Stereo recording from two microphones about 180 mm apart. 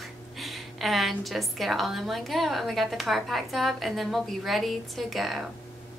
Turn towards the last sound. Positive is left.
turn(degrees=0)  # may be behind; listen again after turning